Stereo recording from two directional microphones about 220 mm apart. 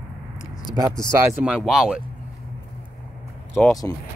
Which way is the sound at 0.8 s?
10° right (ahead or behind).